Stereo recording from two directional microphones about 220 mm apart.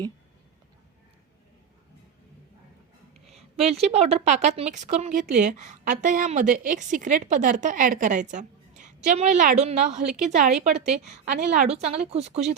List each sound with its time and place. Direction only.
3.2 s a woman's voice: 30° right (ahead or behind)